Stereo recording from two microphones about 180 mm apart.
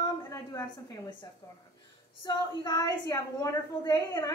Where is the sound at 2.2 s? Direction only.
20° left (ahead or behind).